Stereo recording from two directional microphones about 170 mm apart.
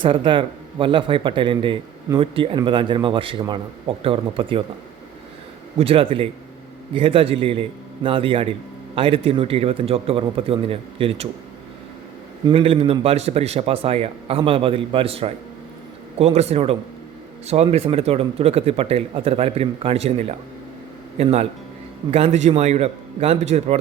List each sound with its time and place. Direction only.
0.0 s speech: 30° right (ahead or behind)
5.8 s speech: 35° right (ahead or behind)
12.5 s speech: 35° right (ahead or behind)